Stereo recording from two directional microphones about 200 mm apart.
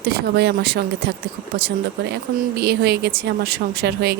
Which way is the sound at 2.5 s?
55° right (ahead or behind).